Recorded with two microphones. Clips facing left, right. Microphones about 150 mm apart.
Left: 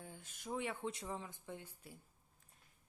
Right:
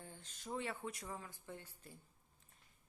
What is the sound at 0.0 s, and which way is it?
Speech, 10° left (ahead or behind).